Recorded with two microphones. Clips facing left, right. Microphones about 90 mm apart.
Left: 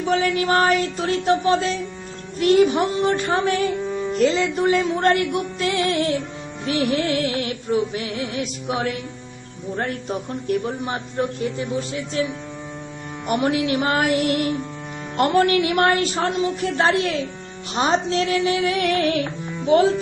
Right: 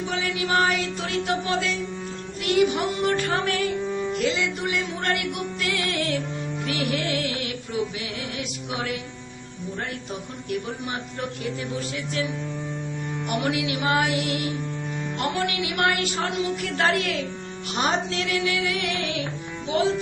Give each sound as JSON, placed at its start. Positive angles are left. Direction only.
{"t": 0.0, "sound": "music", "side_deg": 45}
{"t": 13.2, "sound": "music", "side_deg": 35}